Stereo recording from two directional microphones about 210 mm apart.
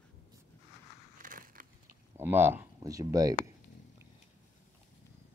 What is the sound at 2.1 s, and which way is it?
Speech, 10° right (ahead or behind).